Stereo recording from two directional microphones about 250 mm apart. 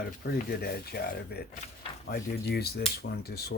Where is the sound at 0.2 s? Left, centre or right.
Left.